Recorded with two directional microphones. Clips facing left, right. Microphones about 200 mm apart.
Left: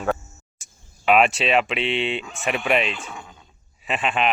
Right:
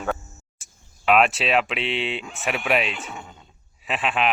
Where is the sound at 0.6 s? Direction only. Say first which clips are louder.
Left 1 dB; centre (ahead or behind).